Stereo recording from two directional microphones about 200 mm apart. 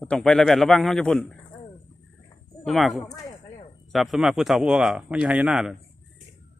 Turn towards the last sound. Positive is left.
turn(degrees=-5)  # may be behind; listen again after turning